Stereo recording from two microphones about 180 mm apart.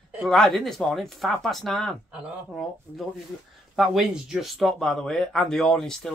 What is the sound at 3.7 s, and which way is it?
Speech, centre (ahead or behind).